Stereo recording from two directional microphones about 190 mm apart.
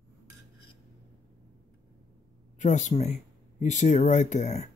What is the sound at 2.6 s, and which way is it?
Speech, 40° left (ahead or behind).